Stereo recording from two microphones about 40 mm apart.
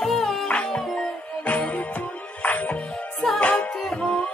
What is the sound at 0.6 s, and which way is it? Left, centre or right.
Music, centre.